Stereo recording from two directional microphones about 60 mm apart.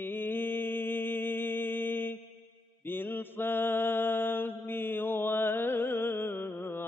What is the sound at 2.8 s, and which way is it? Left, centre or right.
Mantra, left.